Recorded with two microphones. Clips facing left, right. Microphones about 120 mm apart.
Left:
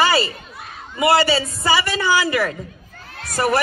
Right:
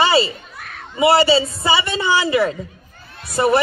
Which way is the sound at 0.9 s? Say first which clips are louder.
Right 3 dB; 25° right (ahead or behind).